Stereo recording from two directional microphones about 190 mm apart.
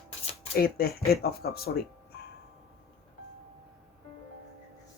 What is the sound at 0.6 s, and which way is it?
Speech, 50° left (ahead or behind).